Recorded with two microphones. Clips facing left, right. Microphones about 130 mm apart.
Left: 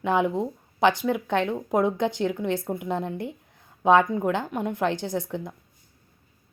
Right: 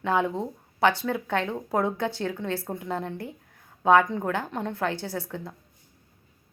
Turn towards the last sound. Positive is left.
turn(degrees=15)  # may be behind; listen again after turning